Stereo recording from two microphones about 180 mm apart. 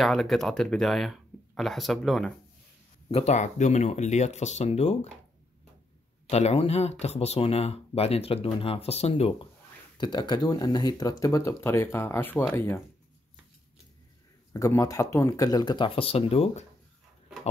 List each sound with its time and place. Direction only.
0.0 s speech: centre (ahead or behind)
3.1 s speech: 35° left (ahead or behind)
6.2 s speech: 35° left (ahead or behind)
9.9 s speech: 25° left (ahead or behind)
14.5 s speech: 15° left (ahead or behind); by 16.6 s 35° left (ahead or behind)